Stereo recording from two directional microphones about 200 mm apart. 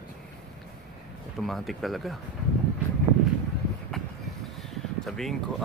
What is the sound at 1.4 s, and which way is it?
Speech, centre (ahead or behind).